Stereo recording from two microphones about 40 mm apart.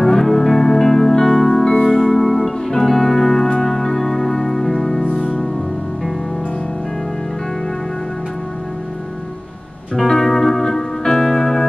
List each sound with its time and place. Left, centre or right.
0.0 s music: centre
5.0 s music: left
9.9 s music: centre